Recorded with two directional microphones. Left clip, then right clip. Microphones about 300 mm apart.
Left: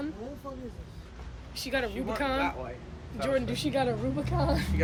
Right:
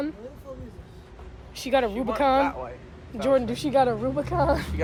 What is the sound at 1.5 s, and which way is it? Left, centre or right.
Speech, right.